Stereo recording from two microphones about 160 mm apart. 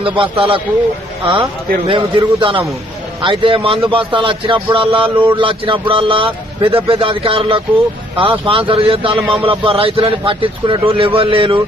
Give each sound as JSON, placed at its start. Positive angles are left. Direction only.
{"t": 0.0, "sound": "a man's voice", "side_deg": -30}
{"t": 1.9, "sound": "a man's voice", "side_deg": -30}